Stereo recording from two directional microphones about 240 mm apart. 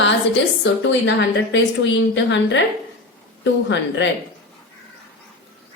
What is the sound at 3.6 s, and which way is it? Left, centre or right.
Speech, left.